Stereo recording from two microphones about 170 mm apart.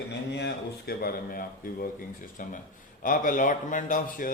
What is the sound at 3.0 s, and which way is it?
A man's voice, 50° left (ahead or behind).